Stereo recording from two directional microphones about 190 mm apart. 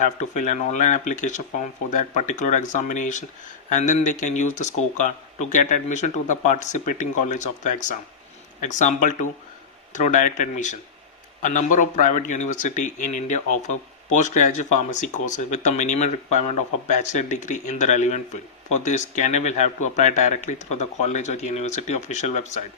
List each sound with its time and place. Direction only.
0.0 s speech: 40° left (ahead or behind)